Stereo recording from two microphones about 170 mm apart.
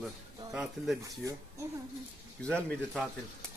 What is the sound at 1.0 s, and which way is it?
Speech, 20° right (ahead or behind).